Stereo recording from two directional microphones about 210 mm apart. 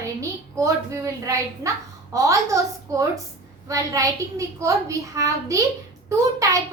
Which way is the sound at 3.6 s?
15° right (ahead or behind).